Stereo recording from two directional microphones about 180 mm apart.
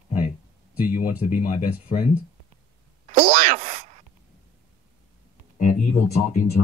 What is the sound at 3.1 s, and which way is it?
Speech, 40° right (ahead or behind).